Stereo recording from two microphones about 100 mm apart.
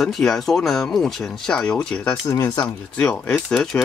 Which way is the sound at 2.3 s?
35° left (ahead or behind).